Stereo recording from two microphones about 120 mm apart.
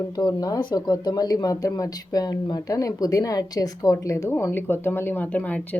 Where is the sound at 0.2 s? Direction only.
35° left (ahead or behind).